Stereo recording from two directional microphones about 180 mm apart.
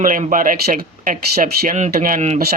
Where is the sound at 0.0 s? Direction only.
50° right (ahead or behind).